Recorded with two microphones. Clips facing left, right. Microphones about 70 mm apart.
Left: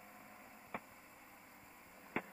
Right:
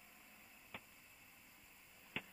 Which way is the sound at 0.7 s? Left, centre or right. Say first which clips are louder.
Left 8 dB; left.